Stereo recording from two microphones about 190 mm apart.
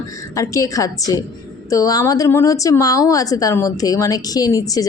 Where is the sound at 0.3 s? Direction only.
15° left (ahead or behind).